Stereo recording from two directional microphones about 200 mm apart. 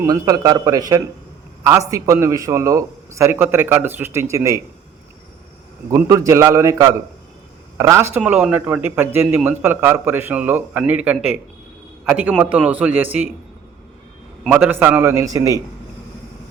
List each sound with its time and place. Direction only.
0.0 s a man's voice: 20° right (ahead or behind)
5.9 s a man's voice: 15° right (ahead or behind)
14.4 s a man's voice: 5° right (ahead or behind)